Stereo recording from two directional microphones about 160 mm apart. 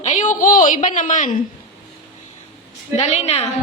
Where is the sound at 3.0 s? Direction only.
40° left (ahead or behind).